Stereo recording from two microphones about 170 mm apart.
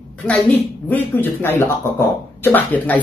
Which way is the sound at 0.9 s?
10° left (ahead or behind).